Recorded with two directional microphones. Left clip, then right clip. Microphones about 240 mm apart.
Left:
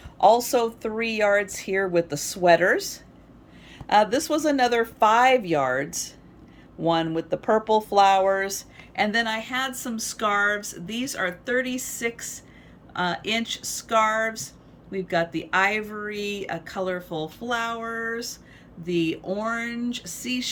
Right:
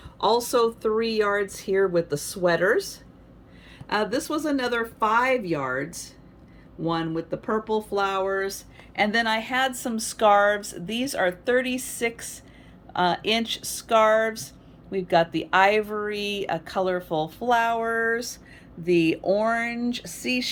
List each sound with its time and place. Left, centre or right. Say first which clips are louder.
0.8 s speech: right 1 dB; centre
3.8 s speech: left 6 dB; centre